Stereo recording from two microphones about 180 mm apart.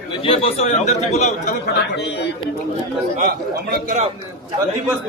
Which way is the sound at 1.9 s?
70° left (ahead or behind).